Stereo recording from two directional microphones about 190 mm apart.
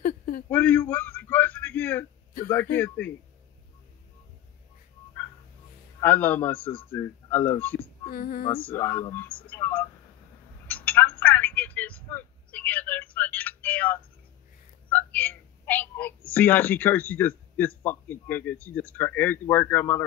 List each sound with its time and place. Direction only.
0.5 s a sound: 10° left (ahead or behind)
2.4 s speech: 10° left (ahead or behind)
5.9 s speech: 10° left (ahead or behind)
8.1 s a sound: 50° left (ahead or behind)
8.6 s speech: 10° left (ahead or behind)
10.7 s telephone: 10° left (ahead or behind)
14.9 s speech: 10° left (ahead or behind)